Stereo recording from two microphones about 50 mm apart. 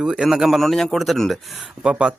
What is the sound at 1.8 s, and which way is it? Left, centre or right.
Speech, centre.